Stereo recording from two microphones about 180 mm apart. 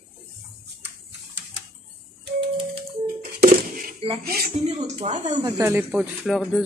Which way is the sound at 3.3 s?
50° right (ahead or behind).